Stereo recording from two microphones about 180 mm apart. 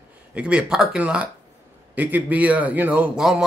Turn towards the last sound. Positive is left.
turn(degrees=-5)  # may be behind; listen again after turning